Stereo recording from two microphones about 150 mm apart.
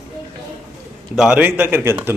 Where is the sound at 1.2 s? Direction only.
10° right (ahead or behind).